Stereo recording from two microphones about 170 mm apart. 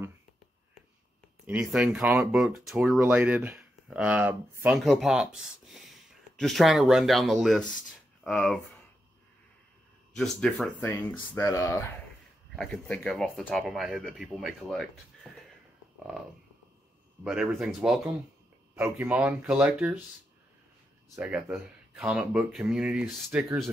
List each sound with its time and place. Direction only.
1.4 s speech: 10° right (ahead or behind)
3.1 s speech: 15° right (ahead or behind)
4.7 s speech: centre (ahead or behind)
10.1 s speech: centre (ahead or behind)
12.5 s speech: 5° left (ahead or behind)
17.2 s speech: 5° right (ahead or behind)
21.2 s speech: 10° right (ahead or behind)